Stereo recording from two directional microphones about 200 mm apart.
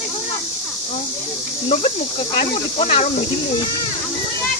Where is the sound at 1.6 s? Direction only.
30° left (ahead or behind).